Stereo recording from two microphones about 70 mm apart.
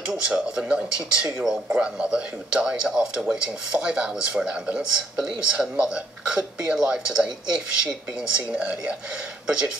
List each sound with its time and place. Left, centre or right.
0.0 s a man's voice: centre